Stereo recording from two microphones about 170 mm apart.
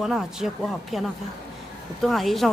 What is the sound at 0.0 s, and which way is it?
Speech, 5° right (ahead or behind).